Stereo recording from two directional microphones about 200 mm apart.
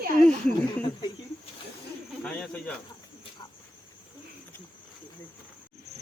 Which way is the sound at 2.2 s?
5° left (ahead or behind).